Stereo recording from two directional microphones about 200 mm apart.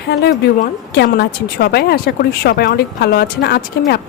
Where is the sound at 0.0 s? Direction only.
55° left (ahead or behind).